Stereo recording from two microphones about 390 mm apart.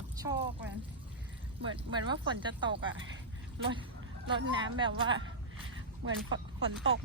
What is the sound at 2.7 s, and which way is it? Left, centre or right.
Speech, right.